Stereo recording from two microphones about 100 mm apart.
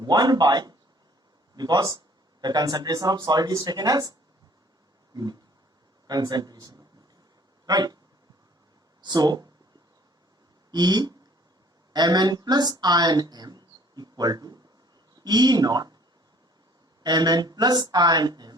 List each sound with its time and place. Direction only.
0.0 s a woman's voice: 45° right (ahead or behind)
5.1 s speech: 40° right (ahead or behind)
9.0 s speech: 45° right (ahead or behind)
10.7 s speech: 45° right (ahead or behind)
17.0 s a woman's voice: 45° right (ahead or behind)